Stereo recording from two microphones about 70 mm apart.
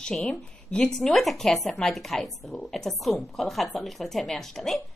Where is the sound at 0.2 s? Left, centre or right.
Centre.